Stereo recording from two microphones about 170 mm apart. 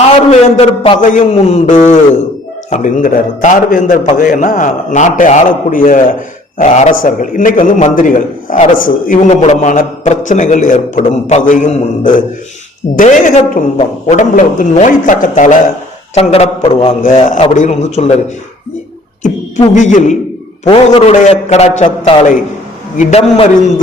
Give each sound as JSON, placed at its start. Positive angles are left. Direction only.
{"t": 0.3, "sound": "a man's voice", "side_deg": 40}
{"t": 0.9, "sound": "a man's voice", "side_deg": 50}
{"t": 16.1, "sound": "a man's voice", "side_deg": 35}
{"t": 17.0, "sound": "a man's voice", "side_deg": 45}
{"t": 19.2, "sound": "beatboxing", "side_deg": 45}
{"t": 20.7, "sound": "a man's voice", "side_deg": 40}
{"t": 23.0, "sound": "a man's voice", "side_deg": 40}